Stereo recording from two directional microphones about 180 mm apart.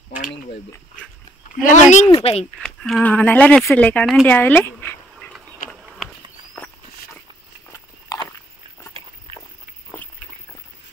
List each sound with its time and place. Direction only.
1.6 s speech: 45° left (ahead or behind)
2.0 s speech: 30° left (ahead or behind)
2.6 s speech: 5° left (ahead or behind)
4.3 s dog: 10° left (ahead or behind)
5.6 s a sound: 50° left (ahead or behind)
8.1 s biting: 20° left (ahead or behind)